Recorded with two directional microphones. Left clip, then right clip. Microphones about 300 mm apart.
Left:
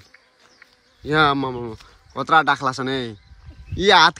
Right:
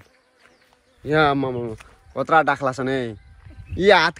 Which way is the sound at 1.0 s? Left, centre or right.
Centre.